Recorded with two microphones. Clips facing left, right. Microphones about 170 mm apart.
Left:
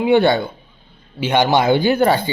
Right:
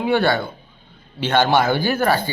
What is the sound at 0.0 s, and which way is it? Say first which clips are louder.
Speech: left 4 dB; 20° left (ahead or behind).